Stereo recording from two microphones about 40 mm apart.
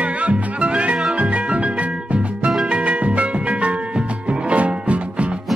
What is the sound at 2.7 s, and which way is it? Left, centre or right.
Music, right.